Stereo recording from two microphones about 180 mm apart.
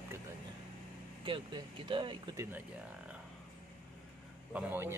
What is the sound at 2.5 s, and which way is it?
Speech, 5° right (ahead or behind).